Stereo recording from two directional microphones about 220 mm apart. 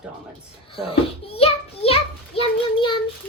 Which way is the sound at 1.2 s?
25° left (ahead or behind).